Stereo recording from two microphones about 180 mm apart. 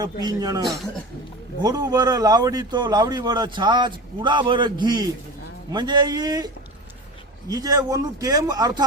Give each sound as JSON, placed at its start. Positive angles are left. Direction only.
{"t": 0.0, "sound": "a man's voice", "side_deg": -20}